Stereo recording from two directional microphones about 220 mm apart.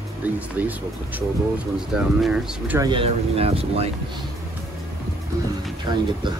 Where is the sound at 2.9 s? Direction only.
25° right (ahead or behind).